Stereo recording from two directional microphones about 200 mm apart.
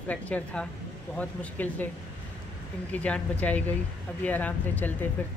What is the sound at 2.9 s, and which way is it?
A woman's voice, 5° left (ahead or behind).